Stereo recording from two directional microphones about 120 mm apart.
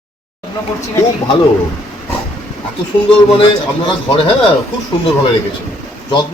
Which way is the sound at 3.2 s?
45° left (ahead or behind).